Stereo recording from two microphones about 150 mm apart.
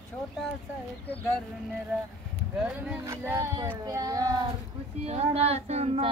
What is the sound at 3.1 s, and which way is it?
Speech, 20° right (ahead or behind).